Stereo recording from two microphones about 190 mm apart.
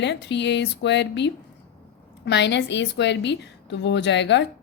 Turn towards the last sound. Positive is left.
turn(degrees=65)  # may be behind; listen again after turning